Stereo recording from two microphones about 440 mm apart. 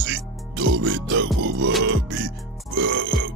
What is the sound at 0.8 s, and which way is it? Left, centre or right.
Music, right.